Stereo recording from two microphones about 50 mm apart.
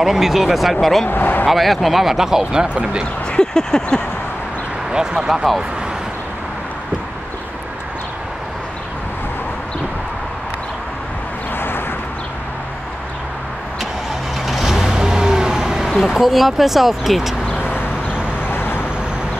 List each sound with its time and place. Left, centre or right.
0.0 s speech: centre
1.1 s speech: left
1.5 s speech: centre; by 3.1 s right
3.3 s a sound: centre
4.9 s speech: centre
11.5 s vehicle: left
14.4 s vehicle: centre
16.0 s speech: centre
17.6 s vehicle: left